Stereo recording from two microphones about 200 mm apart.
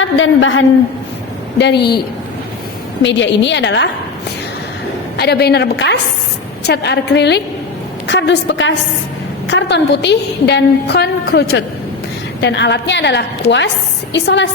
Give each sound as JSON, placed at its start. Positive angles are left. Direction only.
{"t": 0.0, "sound": "a woman's voice", "side_deg": 70}
{"t": 1.5, "sound": "a woman's voice", "side_deg": 55}
{"t": 3.0, "sound": "a woman's voice", "side_deg": 65}
{"t": 5.1, "sound": "a woman's voice", "side_deg": 55}